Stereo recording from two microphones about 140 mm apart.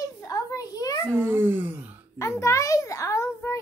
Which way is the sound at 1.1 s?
15° right (ahead or behind).